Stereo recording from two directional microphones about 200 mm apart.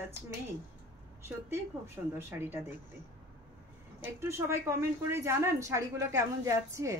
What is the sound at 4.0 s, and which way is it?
A woman's voice, 15° right (ahead or behind).